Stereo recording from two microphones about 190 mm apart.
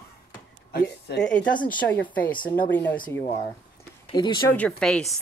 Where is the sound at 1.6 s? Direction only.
10° left (ahead or behind).